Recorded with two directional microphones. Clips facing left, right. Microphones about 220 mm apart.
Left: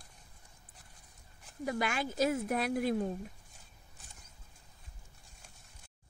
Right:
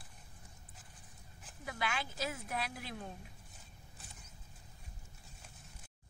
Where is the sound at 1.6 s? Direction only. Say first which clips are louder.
Left 7 dB; 45° left (ahead or behind).